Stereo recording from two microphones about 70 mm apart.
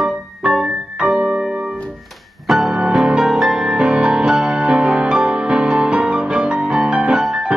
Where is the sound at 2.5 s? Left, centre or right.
Centre.